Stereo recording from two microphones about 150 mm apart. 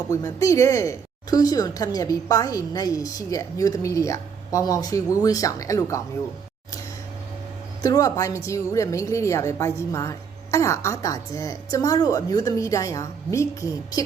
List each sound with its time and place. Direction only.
0.1 s a woman's voice: 25° left (ahead or behind)
7.8 s a woman's voice: 25° left (ahead or behind)